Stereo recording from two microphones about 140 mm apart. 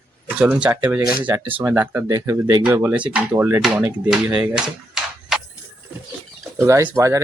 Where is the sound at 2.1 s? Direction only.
25° right (ahead or behind).